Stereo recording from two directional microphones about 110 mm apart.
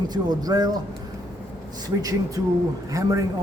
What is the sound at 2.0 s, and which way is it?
Speech, 30° right (ahead or behind).